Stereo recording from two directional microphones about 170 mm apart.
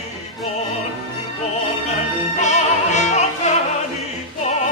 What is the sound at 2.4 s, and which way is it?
Music, 45° left (ahead or behind).